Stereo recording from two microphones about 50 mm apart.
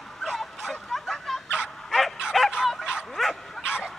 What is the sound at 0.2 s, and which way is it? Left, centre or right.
Fowl, centre.